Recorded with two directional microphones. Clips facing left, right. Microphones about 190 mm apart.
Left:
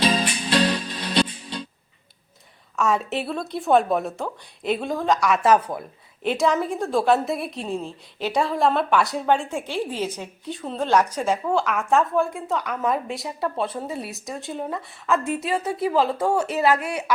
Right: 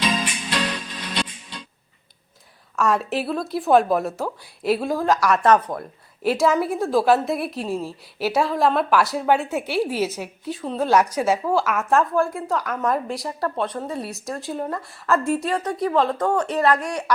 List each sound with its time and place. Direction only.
0.0 s music: 35° left (ahead or behind)
2.7 s a woman's voice: centre (ahead or behind)
6.2 s a woman's voice: centre (ahead or behind)